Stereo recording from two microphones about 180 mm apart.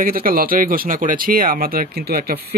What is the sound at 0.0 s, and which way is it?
Speech, 55° right (ahead or behind).